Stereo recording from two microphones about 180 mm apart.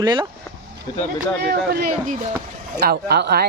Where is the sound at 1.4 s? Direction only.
60° right (ahead or behind).